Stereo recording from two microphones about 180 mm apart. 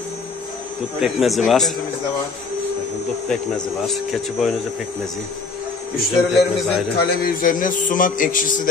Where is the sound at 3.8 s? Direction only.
Centre (ahead or behind).